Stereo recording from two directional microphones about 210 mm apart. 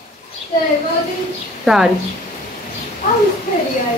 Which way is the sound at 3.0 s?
40° left (ahead or behind).